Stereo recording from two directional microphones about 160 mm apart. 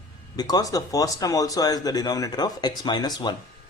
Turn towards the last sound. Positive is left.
turn(degrees=25)  # may be behind; listen again after turning